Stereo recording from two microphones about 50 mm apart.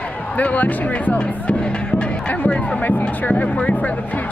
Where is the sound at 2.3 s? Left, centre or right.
Left.